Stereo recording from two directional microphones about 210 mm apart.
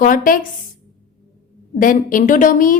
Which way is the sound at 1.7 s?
40° left (ahead or behind).